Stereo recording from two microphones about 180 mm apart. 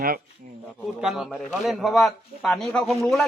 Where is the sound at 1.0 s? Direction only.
Centre (ahead or behind).